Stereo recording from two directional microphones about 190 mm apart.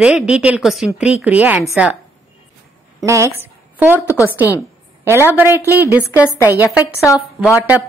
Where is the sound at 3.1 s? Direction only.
15° right (ahead or behind).